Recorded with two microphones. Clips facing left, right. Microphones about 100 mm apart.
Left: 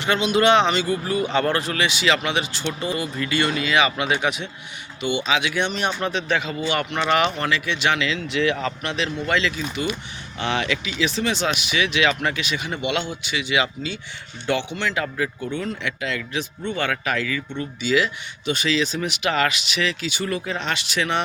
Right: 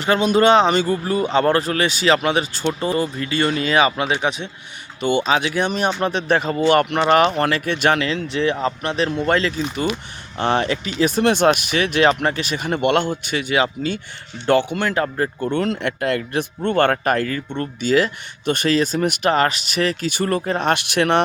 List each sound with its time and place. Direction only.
0.0 s speech: 40° right (ahead or behind)
4.9 s speech: 45° right (ahead or behind)
15.4 s speech: 70° right (ahead or behind)
15.9 s speech: 50° right (ahead or behind)